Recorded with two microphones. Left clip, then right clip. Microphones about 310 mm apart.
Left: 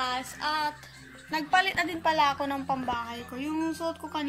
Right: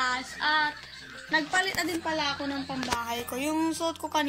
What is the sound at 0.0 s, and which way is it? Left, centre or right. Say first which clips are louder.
Female singing: right 2 dB; centre.